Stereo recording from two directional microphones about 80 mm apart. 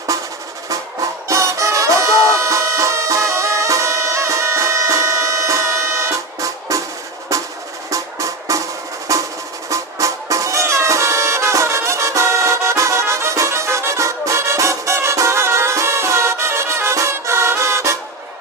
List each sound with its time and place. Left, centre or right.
0.1 s drum: right
1.3 s music: right
7.9 s music: right
9.1 s percussion: right
9.6 s music: right